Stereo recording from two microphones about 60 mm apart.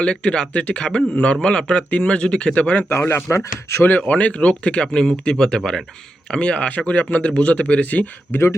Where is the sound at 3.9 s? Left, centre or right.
Left.